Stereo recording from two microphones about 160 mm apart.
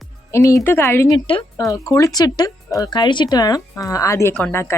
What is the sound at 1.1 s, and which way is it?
Speech, 30° left (ahead or behind).